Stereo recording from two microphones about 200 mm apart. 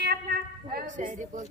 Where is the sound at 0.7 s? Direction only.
40° right (ahead or behind).